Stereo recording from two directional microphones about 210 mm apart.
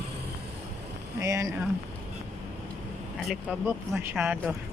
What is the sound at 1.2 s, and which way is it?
Speech, 15° right (ahead or behind).